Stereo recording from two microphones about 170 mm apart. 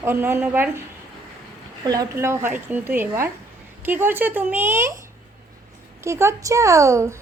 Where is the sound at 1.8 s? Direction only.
20° right (ahead or behind).